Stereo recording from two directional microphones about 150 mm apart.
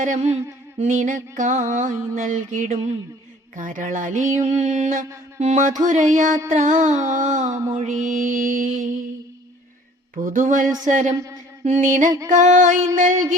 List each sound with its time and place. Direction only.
0.0 s music: 55° right (ahead or behind)
7.4 s a sound: 20° right (ahead or behind)
7.9 s music: 60° right (ahead or behind)
10.2 s music: 60° right (ahead or behind)